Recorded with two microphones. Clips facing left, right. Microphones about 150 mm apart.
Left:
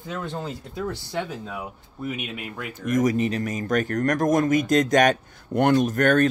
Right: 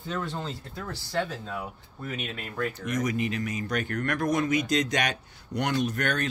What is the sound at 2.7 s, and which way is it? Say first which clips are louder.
Speech: left 10 dB; 45° left (ahead or behind).